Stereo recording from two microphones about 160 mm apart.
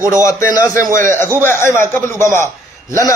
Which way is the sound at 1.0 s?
15° left (ahead or behind).